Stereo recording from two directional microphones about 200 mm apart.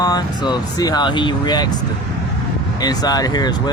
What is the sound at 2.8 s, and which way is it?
Speech, 20° left (ahead or behind).